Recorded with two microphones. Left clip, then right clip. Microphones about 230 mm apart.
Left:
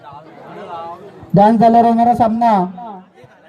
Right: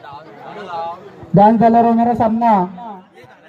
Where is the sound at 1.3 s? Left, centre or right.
Left.